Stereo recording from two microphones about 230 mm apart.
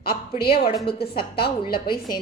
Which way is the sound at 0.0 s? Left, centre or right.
Left.